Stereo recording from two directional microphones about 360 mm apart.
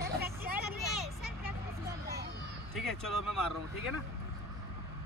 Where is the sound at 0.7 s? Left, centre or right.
Centre.